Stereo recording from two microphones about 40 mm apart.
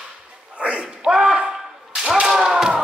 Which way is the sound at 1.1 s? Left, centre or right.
Centre.